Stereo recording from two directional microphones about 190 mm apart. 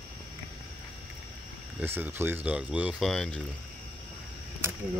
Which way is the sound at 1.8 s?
10° right (ahead or behind).